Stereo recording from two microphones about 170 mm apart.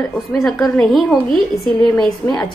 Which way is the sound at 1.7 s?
25° left (ahead or behind).